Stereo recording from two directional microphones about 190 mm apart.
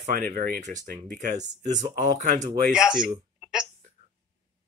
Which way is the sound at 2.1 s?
40° right (ahead or behind).